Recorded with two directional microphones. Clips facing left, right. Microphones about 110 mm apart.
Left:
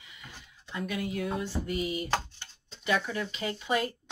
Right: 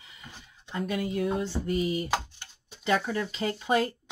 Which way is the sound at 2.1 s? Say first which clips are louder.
Right 1 dB; 10° right (ahead or behind).